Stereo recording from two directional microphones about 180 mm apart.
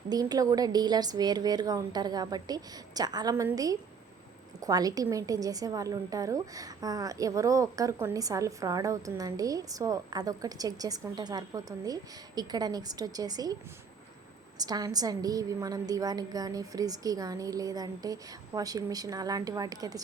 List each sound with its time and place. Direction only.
0.1 s a woman's voice: 20° right (ahead or behind)
14.6 s a woman's voice: 20° right (ahead or behind)